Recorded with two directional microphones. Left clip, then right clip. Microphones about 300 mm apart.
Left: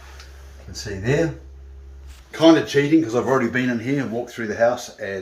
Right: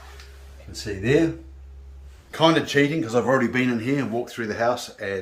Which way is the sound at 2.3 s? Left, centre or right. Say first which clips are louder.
Left 4 dB; centre.